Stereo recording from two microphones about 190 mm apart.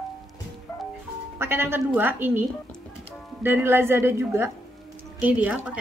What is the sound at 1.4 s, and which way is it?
Speech, 10° right (ahead or behind).